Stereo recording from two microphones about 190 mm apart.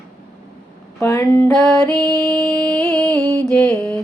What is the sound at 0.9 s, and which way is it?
Music, 15° left (ahead or behind).